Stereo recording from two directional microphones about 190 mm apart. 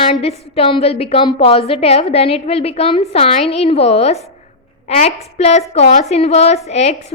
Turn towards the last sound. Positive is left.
turn(degrees=35)  # may be behind; listen again after turning